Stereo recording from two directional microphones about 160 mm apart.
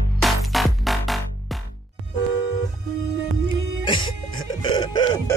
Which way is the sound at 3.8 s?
30° left (ahead or behind).